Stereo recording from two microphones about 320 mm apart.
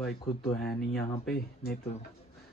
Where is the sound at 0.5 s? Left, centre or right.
Left.